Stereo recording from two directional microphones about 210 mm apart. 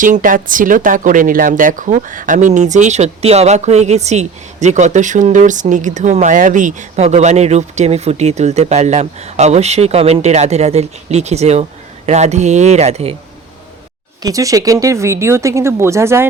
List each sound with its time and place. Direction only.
0.0 s speech: 40° right (ahead or behind)
14.2 s speech: 15° right (ahead or behind)